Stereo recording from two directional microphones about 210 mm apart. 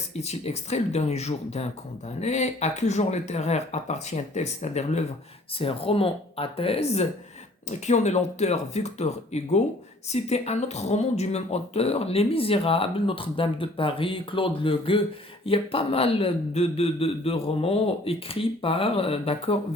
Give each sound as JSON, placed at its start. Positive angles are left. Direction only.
{"t": 0.1, "sound": "speech", "side_deg": 30}